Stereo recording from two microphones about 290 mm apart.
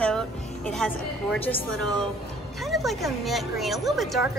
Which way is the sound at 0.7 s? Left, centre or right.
Centre.